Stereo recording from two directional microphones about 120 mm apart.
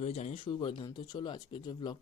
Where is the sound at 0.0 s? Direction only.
65° left (ahead or behind).